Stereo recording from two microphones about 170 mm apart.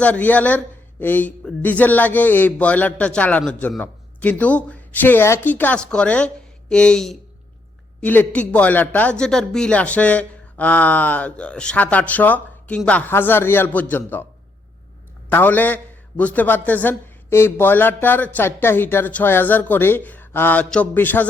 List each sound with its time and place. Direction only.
0.0 s a man's voice: 10° left (ahead or behind)
15.3 s a man's voice: 10° left (ahead or behind)